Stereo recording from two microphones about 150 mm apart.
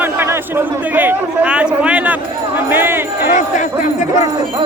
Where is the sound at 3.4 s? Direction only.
55° left (ahead or behind).